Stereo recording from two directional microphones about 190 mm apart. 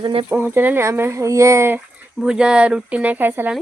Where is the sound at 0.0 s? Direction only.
25° right (ahead or behind).